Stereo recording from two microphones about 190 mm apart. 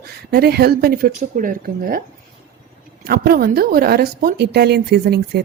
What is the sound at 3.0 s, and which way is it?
Speech, 50° right (ahead or behind).